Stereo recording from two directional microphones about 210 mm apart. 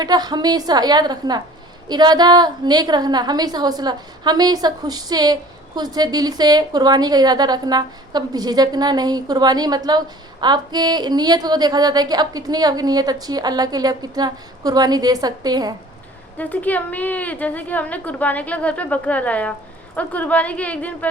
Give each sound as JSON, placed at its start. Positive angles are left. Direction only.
{"t": 0.0, "sound": "a woman's voice", "side_deg": -20}
{"t": 16.4, "sound": "a woman's voice", "side_deg": 10}